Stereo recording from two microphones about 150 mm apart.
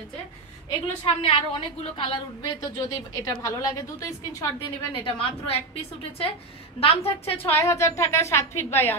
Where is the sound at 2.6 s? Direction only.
25° left (ahead or behind).